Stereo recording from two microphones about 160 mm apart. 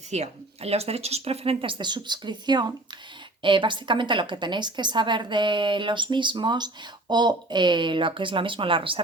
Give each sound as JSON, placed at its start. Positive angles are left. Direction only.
{"t": 0.1, "sound": "a woman's voice", "side_deg": -40}